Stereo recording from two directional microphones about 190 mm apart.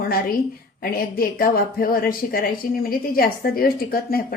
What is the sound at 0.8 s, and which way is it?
Speech, 50° left (ahead or behind).